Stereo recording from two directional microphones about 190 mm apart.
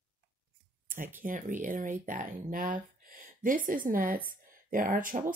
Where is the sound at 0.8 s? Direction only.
45° right (ahead or behind).